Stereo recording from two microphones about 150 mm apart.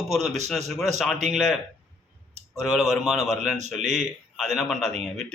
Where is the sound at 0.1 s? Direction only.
Centre (ahead or behind).